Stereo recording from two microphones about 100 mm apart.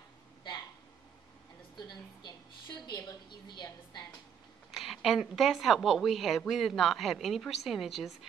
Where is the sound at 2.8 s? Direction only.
45° left (ahead or behind).